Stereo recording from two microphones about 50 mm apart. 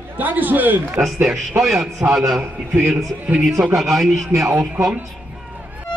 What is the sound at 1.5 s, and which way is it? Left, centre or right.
Speech, right.